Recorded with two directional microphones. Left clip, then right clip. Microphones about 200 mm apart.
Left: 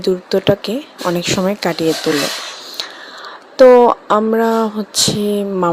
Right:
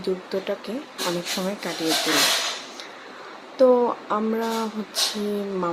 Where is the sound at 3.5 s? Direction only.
40° left (ahead or behind).